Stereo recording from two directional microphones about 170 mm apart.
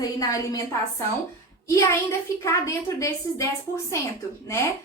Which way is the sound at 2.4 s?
15° left (ahead or behind).